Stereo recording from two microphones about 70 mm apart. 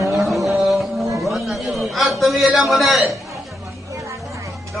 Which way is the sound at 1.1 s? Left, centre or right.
Right.